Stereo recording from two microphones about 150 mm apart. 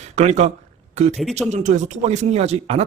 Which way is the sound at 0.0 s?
50° right (ahead or behind).